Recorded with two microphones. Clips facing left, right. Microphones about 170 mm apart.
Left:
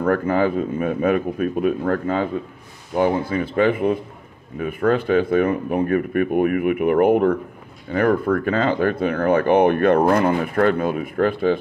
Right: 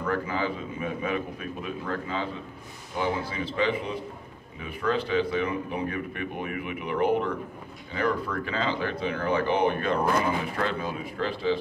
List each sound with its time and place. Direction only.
0.0 s speech: 55° left (ahead or behind)